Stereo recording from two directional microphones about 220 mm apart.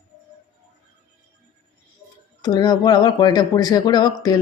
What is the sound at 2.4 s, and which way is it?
Speech, 20° left (ahead or behind).